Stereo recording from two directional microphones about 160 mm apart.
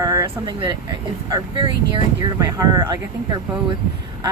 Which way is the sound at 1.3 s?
30° right (ahead or behind).